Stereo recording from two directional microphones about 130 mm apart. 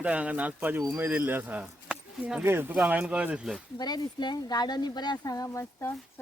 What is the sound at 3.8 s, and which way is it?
Speech, 30° left (ahead or behind).